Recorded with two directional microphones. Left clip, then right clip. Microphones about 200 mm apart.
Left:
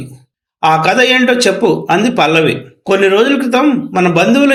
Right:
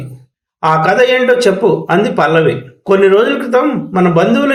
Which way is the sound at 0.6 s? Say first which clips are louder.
Even; 55° left (ahead or behind).